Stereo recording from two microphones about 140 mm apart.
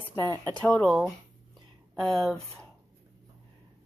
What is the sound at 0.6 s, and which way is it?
A woman's voice, 5° left (ahead or behind).